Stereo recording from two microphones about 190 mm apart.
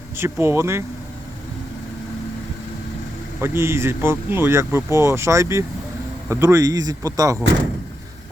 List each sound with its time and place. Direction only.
0.2 s speech: 15° right (ahead or behind)
3.4 s speech: 15° right (ahead or behind)